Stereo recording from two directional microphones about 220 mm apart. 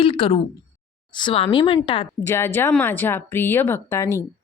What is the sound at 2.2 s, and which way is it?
Speech, 10° left (ahead or behind).